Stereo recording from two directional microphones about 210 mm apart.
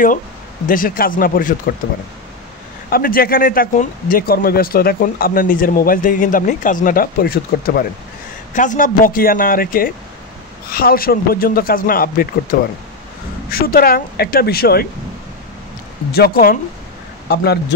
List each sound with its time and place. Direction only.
0.7 s speech: 40° left (ahead or behind)
2.9 s speech: 45° left (ahead or behind)
16.1 s speech: 45° left (ahead or behind)